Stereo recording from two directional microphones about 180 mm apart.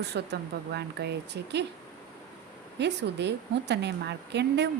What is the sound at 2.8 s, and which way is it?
A woman's voice, 70° right (ahead or behind).